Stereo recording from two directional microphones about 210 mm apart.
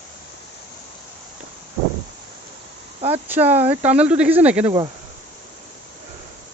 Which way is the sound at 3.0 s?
30° right (ahead or behind).